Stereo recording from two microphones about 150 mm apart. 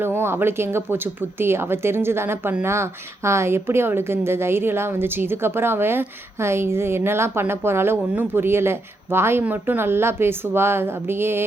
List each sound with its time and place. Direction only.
0.0 s speech: 15° right (ahead or behind)